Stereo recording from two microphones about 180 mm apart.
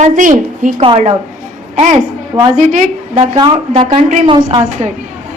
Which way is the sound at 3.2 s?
25° right (ahead or behind).